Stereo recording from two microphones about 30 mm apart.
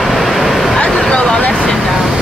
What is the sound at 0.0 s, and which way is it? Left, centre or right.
Vehicle, centre.